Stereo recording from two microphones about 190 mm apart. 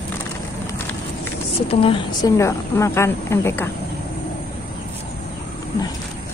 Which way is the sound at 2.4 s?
15° left (ahead or behind).